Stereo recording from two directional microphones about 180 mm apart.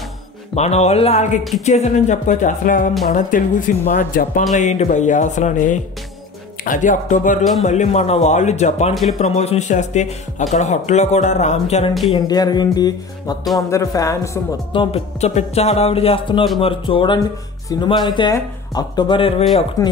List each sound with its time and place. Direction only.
0.6 s speech: 40° left (ahead or behind)
12.3 s speech: 20° left (ahead or behind)
13.4 s music: centre (ahead or behind)
13.7 s speech: 15° left (ahead or behind)
14.7 s speech: 30° left (ahead or behind)
19.8 s speech: 20° left (ahead or behind)